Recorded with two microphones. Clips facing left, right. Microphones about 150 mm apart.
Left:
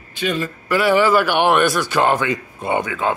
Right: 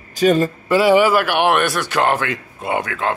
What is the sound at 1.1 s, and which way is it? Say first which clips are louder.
A man's voice: left 1 dB; centre (ahead or behind).